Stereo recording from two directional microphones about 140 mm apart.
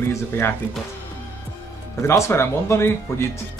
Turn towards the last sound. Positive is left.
turn(degrees=20)  # may be behind; listen again after turning